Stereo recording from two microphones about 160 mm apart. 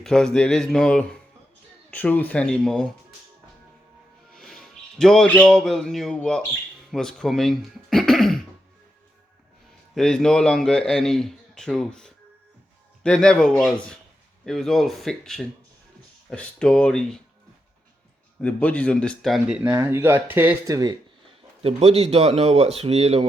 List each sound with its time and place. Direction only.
0.0 s a man's voice: 5° left (ahead or behind)
4.4 s speech: centre (ahead or behind)
9.9 s a man's voice: 5° left (ahead or behind)
18.3 s a man's voice: 5° left (ahead or behind); by 20.7 s 10° right (ahead or behind)
21.6 s speech: 40° right (ahead or behind)